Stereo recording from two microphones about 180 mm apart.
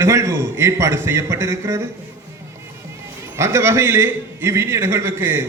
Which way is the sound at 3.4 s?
15° right (ahead or behind).